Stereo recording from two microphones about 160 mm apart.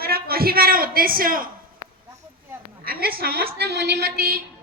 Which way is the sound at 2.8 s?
70° right (ahead or behind).